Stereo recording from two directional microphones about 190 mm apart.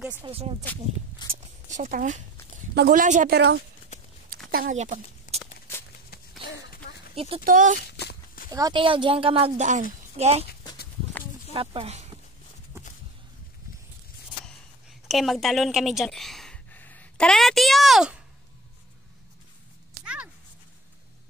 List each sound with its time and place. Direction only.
0.2 s speech: 30° right (ahead or behind)
1.2 s a sound: 25° left (ahead or behind)
1.7 s speech: 40° right (ahead or behind)
3.3 s speech: 60° right (ahead or behind)
4.5 s speech: 45° right (ahead or behind)
6.7 s a sound: 50° left (ahead or behind)
7.2 s speech: 30° right (ahead or behind)
7.4 s speech: 45° right (ahead or behind)
7.9 s walk: 55° left (ahead or behind)
8.5 s speech: 20° right (ahead or behind)
11.5 s speech: 30° right (ahead or behind)
14.4 s a sound: centre (ahead or behind)